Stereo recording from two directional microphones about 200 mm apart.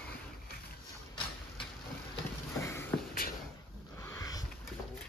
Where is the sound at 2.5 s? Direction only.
15° left (ahead or behind).